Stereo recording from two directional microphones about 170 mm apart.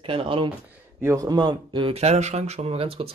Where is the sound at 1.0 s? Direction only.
20° right (ahead or behind).